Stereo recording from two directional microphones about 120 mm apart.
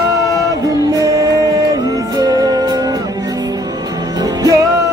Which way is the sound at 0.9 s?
30° right (ahead or behind).